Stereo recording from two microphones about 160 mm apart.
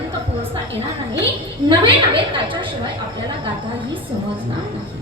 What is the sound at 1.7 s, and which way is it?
Speech, 30° right (ahead or behind).